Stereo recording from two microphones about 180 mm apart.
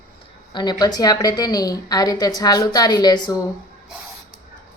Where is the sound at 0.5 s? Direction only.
25° left (ahead or behind).